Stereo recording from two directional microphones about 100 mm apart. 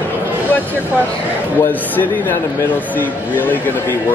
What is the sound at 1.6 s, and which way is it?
A man's voice, 20° left (ahead or behind).